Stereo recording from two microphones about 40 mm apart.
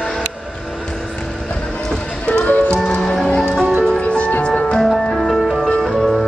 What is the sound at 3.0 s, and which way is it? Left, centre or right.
Music, centre.